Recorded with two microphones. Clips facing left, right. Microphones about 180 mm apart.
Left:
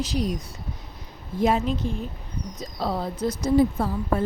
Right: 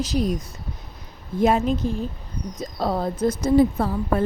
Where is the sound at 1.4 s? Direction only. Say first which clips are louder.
Right 3 dB; 50° right (ahead or behind).